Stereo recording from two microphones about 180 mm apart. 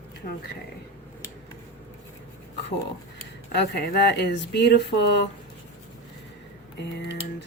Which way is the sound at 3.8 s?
65° left (ahead or behind).